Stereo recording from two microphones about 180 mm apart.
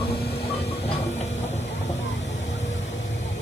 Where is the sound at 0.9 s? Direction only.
40° left (ahead or behind).